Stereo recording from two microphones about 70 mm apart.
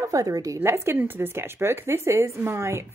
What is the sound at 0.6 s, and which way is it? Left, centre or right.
A woman's voice, right.